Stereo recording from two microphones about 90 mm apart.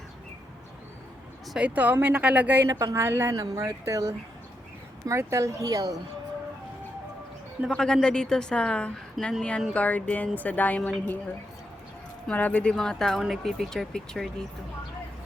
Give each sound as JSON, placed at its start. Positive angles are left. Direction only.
{"t": 1.5, "sound": "speech", "side_deg": -15}
{"t": 2.6, "sound": "speech", "side_deg": -35}
{"t": 3.3, "sound": "speech", "side_deg": -40}
{"t": 7.7, "sound": "a woman's voice", "side_deg": 10}
{"t": 12.3, "sound": "a woman's voice", "side_deg": 15}